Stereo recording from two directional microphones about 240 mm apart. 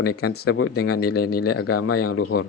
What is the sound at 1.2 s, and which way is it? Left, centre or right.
Speech, left.